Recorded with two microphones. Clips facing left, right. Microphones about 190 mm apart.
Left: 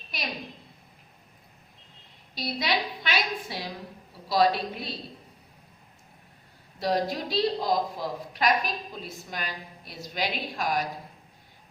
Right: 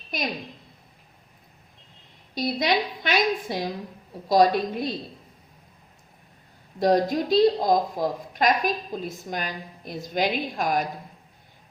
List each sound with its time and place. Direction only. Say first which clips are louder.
0.1 s speech: right 7 dB; 50° right (ahead or behind)
2.3 s speech: right 5 dB; 50° right (ahead or behind)
6.7 s speech: right 6 dB; 45° right (ahead or behind)